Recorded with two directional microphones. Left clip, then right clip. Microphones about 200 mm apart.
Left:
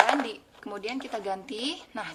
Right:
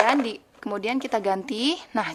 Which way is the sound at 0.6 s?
50° right (ahead or behind).